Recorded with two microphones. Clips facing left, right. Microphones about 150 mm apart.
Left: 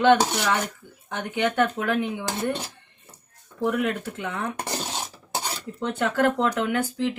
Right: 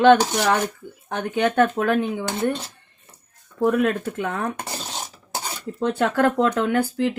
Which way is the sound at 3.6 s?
60° right (ahead or behind).